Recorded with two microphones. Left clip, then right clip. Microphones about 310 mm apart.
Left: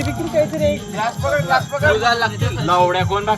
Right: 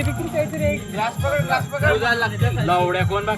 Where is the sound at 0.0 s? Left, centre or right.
Centre.